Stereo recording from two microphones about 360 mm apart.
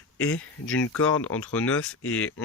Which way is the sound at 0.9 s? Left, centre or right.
Centre.